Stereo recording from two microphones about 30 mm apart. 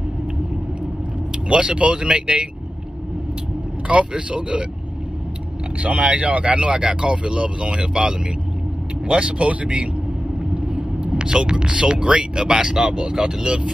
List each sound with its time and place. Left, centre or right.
1.5 s speech: right
3.8 s speech: right
5.8 s speech: right
6.8 s speech: right
9.1 s speech: right
10.5 s vehicle: right
11.1 s speech: right